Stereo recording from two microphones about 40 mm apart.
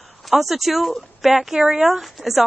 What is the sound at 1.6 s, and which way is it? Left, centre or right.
Speech, right.